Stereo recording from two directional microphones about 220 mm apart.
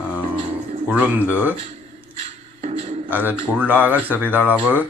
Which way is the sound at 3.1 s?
10° right (ahead or behind).